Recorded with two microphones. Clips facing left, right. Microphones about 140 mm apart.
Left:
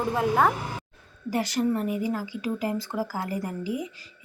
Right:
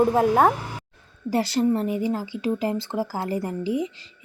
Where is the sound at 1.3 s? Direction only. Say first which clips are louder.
Right 4 dB; 30° right (ahead or behind).